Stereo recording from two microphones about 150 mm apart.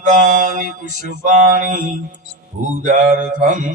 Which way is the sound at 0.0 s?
55° right (ahead or behind).